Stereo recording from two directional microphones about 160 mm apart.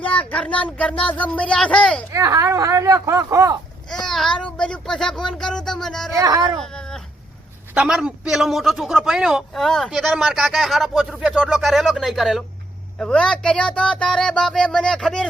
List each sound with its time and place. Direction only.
0.1 s speech: 10° left (ahead or behind)
2.1 s speech: 20° right (ahead or behind)
4.0 s a man's voice: 5° left (ahead or behind)
6.1 s speech: 20° right (ahead or behind)
6.6 s cat: 5° left (ahead or behind)
7.7 s a man's voice: 5° right (ahead or behind)